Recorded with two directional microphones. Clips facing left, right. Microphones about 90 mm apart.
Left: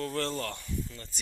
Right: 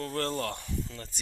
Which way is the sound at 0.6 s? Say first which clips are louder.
Right 1 dB; 85° right.